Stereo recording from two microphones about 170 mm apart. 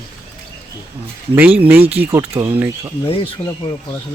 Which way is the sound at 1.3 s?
10° right (ahead or behind).